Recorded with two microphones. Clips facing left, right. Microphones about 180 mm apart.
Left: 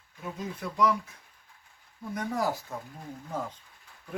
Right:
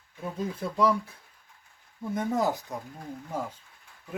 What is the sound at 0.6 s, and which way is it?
Speech, 30° right (ahead or behind).